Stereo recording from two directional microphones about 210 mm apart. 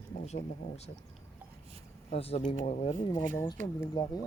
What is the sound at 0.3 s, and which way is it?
Speech, 30° left (ahead or behind).